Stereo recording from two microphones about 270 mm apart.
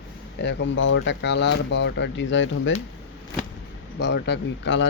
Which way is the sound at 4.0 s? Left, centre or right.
Left.